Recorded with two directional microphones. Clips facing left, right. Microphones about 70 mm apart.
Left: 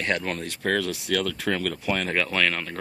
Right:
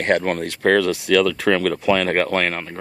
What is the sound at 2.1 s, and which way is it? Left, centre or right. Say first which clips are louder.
Speech: right 7 dB; right.